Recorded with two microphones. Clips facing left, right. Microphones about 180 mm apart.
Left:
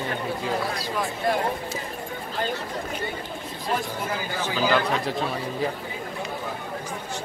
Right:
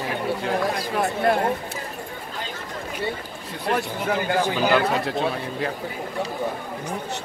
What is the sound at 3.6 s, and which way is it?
Speech, 65° right (ahead or behind).